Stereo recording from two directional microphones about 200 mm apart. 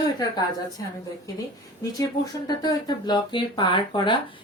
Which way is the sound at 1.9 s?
20° left (ahead or behind).